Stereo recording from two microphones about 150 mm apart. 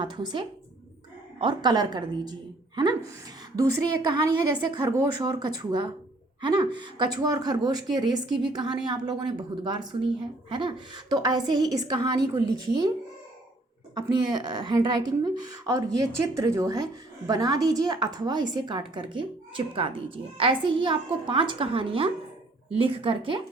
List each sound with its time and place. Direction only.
0.0 s a woman's voice: 30° right (ahead or behind)
4.1 s a woman's voice: 30° right (ahead or behind)
13.9 s a woman's voice: 30° right (ahead or behind)